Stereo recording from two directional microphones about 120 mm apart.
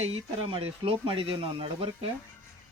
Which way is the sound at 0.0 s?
55° right (ahead or behind).